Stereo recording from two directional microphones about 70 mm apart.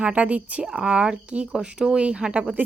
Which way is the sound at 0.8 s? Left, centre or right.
Centre.